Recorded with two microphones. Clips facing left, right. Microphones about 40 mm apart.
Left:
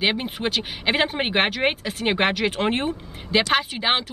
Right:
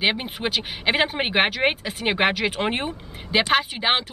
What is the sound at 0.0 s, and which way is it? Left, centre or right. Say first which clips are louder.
Speech: even; centre.